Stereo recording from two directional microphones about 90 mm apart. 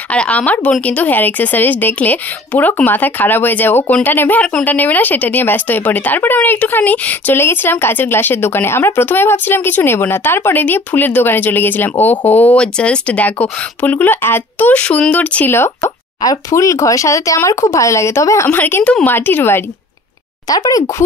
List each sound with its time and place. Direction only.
0.1 s a woman's voice: 15° left (ahead or behind)
14.7 s speech: 15° left (ahead or behind)
15.5 s a woman's voice: 25° left (ahead or behind)
16.2 s speech: 40° left (ahead or behind)
18.6 s a woman's voice: 25° left (ahead or behind)
20.4 s speech: 40° left (ahead or behind)